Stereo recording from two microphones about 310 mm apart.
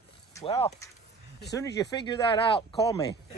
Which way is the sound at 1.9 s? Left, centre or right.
Centre.